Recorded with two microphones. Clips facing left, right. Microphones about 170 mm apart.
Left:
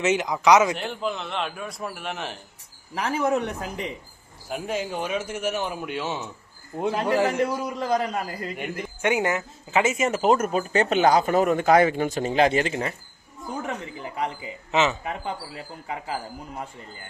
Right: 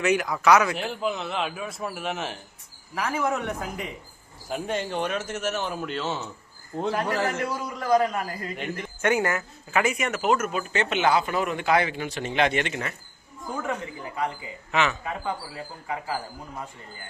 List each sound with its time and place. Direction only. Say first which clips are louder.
0.0 s a man's voice: left 1 dB; 20° left (ahead or behind)
0.8 s a man's voice: right 1 dB; 5° right (ahead or behind)
2.9 s speech: left 3 dB; 30° left (ahead or behind)
4.4 s a man's voice: even; 5° left (ahead or behind); by 8.2 s 20° left (ahead or behind)
8.5 s speech: left 1 dB; 10° left (ahead or behind); by 13.0 s 30° left (ahead or behind)
14.7 s a man's voice: left 2 dB; 25° left (ahead or behind)